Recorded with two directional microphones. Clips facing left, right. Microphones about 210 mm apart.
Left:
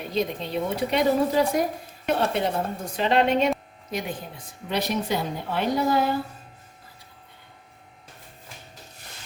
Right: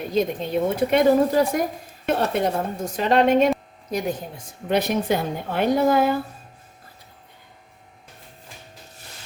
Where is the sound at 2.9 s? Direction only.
45° right (ahead or behind).